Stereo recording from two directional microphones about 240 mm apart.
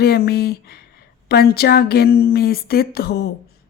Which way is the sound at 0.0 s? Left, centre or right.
Left.